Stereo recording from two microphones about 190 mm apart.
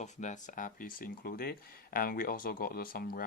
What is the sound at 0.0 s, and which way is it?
Speech, 40° left (ahead or behind).